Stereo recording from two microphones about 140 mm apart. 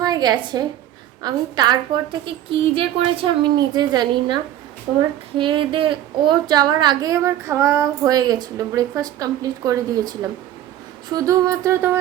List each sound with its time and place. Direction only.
0.0 s a woman's voice: 30° right (ahead or behind)
5.4 s a woman's voice: 35° right (ahead or behind); by 11.9 s 20° right (ahead or behind)